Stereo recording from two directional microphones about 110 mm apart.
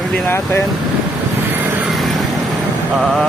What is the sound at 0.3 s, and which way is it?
Speech, 20° left (ahead or behind).